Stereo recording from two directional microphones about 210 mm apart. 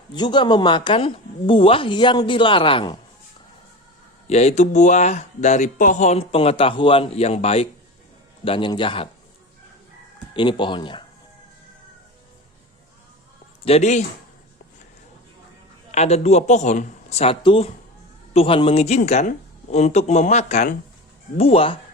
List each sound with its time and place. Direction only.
0.1 s speech: 20° left (ahead or behind)
4.3 s speech: 30° left (ahead or behind)
10.3 s speech: 20° left (ahead or behind)
13.6 s speech: 30° left (ahead or behind)
15.9 s speech: 30° left (ahead or behind)